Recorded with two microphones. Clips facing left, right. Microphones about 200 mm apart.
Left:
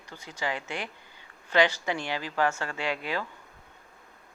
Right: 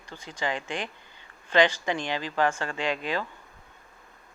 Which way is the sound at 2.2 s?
20° right (ahead or behind).